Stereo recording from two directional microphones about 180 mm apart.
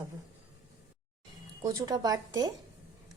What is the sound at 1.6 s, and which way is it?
Speech, 20° right (ahead or behind).